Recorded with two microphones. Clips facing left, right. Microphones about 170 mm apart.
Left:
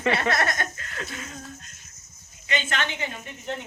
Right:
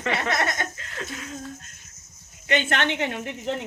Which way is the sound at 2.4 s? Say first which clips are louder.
Right 5 dB; 60° right (ahead or behind).